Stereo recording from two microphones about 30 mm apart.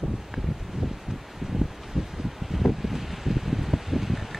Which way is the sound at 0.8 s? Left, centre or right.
Right.